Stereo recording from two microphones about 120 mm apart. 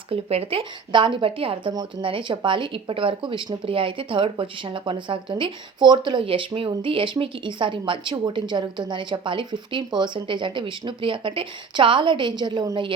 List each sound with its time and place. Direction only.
0.1 s speech: 55° right (ahead or behind)
0.9 s speech: 45° right (ahead or behind)